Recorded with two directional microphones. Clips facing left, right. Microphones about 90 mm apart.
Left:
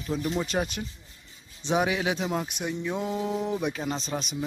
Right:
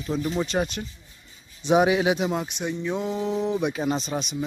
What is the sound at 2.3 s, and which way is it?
Speech, 5° left (ahead or behind).